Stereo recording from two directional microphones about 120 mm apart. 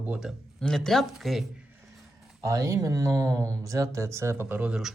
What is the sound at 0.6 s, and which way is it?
Speech, 5° left (ahead or behind).